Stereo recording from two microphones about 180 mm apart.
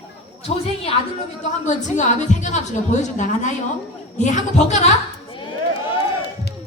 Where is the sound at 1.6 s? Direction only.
40° left (ahead or behind).